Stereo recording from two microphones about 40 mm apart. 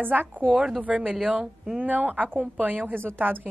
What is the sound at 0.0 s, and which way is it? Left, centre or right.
Speech, right.